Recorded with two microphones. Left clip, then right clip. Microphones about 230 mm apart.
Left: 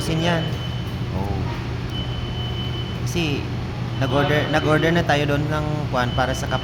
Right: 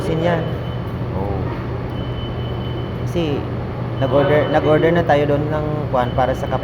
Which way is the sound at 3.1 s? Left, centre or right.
Left.